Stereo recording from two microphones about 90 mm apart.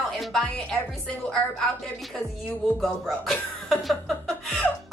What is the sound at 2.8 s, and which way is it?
Speech, 5° left (ahead or behind).